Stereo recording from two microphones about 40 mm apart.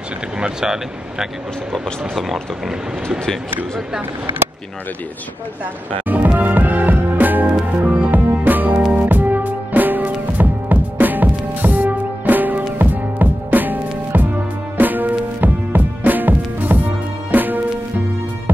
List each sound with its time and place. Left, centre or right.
0.4 s speech: centre
1.7 s speech: centre
6.2 s music: right
7.8 s music: right
8.1 s music: right